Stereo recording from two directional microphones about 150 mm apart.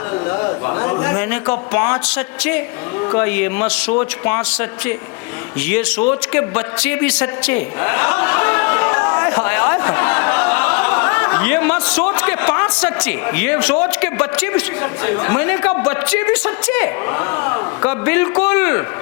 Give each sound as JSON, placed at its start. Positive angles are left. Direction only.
{"t": 0.8, "sound": "a sound", "side_deg": 15}
{"t": 3.2, "sound": "a woman's voice", "side_deg": 10}
{"t": 5.6, "sound": "a man's voice", "side_deg": 10}